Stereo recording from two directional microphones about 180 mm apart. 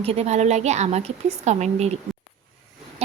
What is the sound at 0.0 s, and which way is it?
A woman's voice, 35° right (ahead or behind).